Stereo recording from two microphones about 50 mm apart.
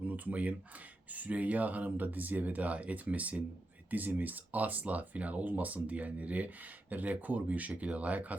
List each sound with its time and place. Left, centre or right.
0.1 s speech: right